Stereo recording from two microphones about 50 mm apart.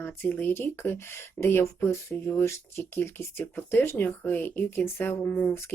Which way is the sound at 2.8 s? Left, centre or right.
Left.